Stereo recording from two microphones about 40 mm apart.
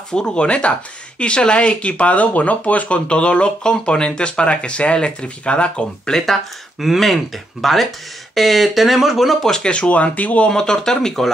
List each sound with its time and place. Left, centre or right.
0.1 s speech: left
6.8 s speech: centre
9.7 s speech: left
10.5 s speech: centre